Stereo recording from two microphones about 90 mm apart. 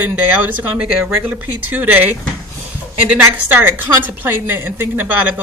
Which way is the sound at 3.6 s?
25° right (ahead or behind).